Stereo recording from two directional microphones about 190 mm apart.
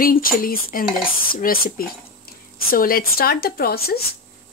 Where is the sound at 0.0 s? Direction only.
50° left (ahead or behind).